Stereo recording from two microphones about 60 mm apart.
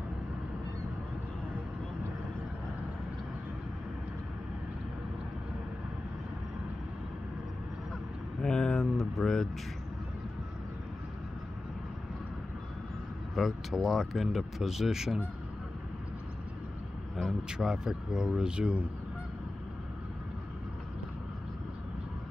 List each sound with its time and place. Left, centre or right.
8.4 s vehicle: centre
13.3 s speech: centre
17.5 s speech: centre